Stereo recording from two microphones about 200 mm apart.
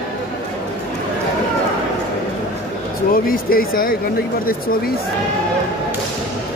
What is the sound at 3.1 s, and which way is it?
Speech, 45° left (ahead or behind).